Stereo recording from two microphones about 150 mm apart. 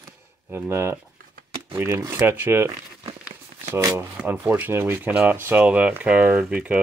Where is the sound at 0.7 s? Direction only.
20° right (ahead or behind).